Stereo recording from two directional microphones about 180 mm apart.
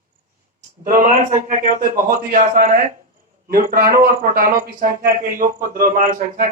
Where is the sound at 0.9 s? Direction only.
45° right (ahead or behind).